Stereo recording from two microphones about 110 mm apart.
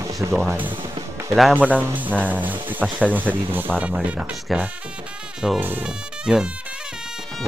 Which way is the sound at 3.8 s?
5° right (ahead or behind).